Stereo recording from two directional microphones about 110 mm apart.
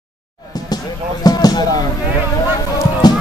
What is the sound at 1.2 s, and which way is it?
Speech, 35° left (ahead or behind).